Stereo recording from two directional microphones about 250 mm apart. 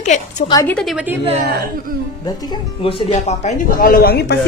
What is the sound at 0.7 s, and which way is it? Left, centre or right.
Speech, centre.